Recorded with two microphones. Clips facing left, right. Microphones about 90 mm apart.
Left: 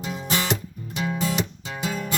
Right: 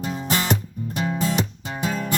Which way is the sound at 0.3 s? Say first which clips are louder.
Right 2 dB; 40° right (ahead or behind).